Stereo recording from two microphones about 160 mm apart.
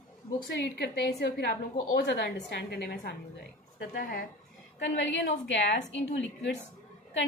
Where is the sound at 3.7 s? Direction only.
65° left (ahead or behind).